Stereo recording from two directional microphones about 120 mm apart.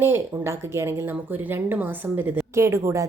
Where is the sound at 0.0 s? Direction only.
20° right (ahead or behind).